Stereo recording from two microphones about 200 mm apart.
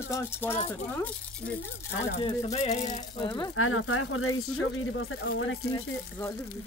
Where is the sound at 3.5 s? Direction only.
90° left; by 5.5 s 75° left (ahead or behind).